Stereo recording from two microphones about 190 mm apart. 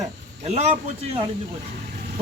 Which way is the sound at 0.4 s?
35° right (ahead or behind).